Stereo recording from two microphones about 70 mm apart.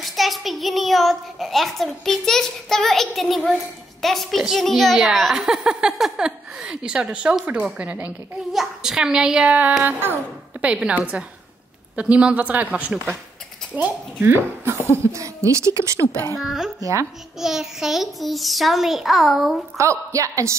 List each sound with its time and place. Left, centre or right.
0.0 s a child's voice: centre
8.5 s a woman's voice: centre; by 10.2 s right
10.6 s a woman's voice: centre; by 14.8 s right
15.1 s a woman's voice: right
16.3 s a child's voice: centre
19.8 s a woman's voice: right